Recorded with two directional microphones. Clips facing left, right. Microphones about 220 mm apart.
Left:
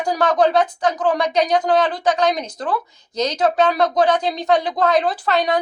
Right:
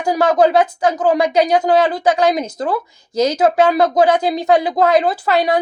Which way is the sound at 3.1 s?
10° right (ahead or behind).